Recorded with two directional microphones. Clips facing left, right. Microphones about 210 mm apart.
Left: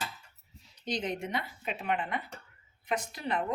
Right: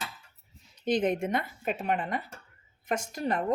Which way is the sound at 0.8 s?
55° right (ahead or behind).